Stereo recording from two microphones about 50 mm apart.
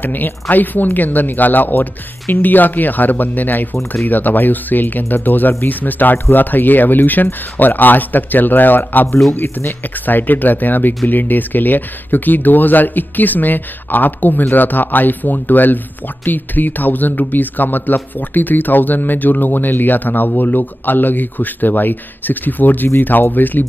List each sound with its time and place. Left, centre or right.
0.0 s speech: left
9.3 s speech: left
10.0 s speech: left